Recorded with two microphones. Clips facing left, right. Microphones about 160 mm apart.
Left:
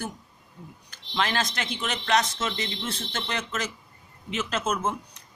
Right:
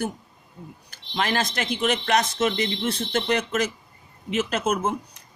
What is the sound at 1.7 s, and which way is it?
Speech, 55° right (ahead or behind).